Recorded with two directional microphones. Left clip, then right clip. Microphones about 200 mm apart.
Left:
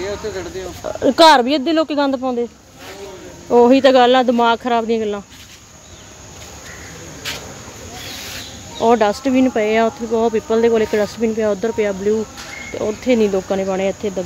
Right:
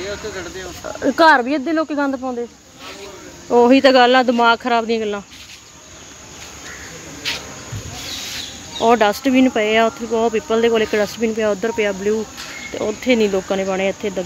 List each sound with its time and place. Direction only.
0.0 s speech: 50° left (ahead or behind)
0.8 s speech: 20° left (ahead or behind)
3.4 s speech: centre (ahead or behind)
8.7 s speech: 5° right (ahead or behind)